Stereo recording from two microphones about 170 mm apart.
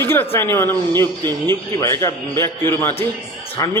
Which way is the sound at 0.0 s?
15° left (ahead or behind).